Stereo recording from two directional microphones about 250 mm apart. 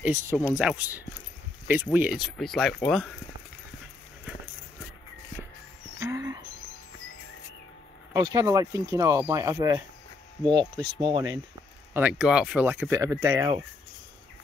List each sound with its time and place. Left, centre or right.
0.0 s speech: centre
5.9 s a sound: centre
8.1 s speech: centre
11.9 s speech: centre